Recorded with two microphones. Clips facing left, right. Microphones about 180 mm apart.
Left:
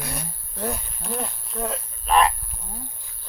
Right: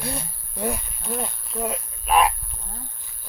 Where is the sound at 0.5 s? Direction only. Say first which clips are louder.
Right 2 dB; 10° right (ahead or behind).